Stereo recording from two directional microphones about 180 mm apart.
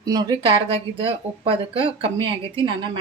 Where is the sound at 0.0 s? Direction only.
20° right (ahead or behind).